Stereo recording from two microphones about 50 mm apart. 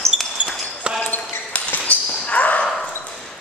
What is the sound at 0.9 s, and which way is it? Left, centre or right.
Basketball bounce, right.